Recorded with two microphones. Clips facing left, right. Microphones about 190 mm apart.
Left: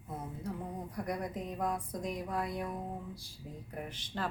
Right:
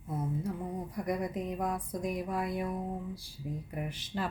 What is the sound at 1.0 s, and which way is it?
Speech, 5° right (ahead or behind).